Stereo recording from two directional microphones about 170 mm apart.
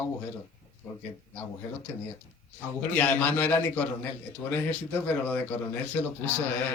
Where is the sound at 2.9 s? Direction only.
10° left (ahead or behind).